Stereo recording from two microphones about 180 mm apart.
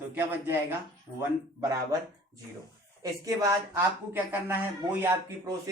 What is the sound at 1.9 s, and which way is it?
A man's voice, 20° right (ahead or behind).